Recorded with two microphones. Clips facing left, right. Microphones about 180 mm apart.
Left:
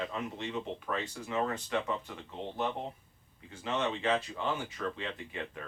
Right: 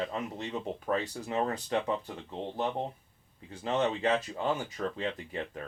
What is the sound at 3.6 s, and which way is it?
Speech, 40° right (ahead or behind).